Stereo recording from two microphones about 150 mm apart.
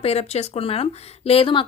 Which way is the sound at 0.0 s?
45° left (ahead or behind).